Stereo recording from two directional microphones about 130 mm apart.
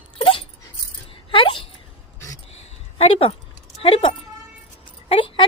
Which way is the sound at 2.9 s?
45° left (ahead or behind).